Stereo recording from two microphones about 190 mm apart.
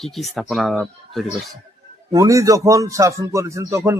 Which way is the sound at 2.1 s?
15° right (ahead or behind).